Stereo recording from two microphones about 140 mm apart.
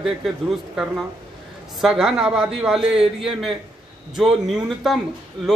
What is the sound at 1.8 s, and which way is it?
A man's voice, 5° right (ahead or behind).